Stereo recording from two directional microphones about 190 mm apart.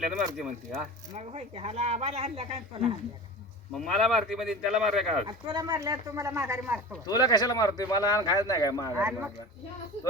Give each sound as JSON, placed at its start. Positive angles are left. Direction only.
{"t": 0.3, "sound": "speech", "side_deg": -5}
{"t": 1.1, "sound": "speech", "side_deg": -35}
{"t": 3.7, "sound": "speech", "side_deg": 0}
{"t": 5.2, "sound": "speech", "side_deg": -20}
{"t": 7.0, "sound": "speech", "side_deg": 20}
{"t": 8.9, "sound": "speech", "side_deg": -10}